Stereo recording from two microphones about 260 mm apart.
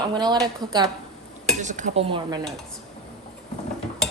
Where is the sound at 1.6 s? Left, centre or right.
Right.